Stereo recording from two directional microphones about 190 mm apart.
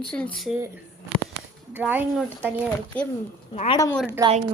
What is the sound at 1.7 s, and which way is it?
Speech, 10° right (ahead or behind).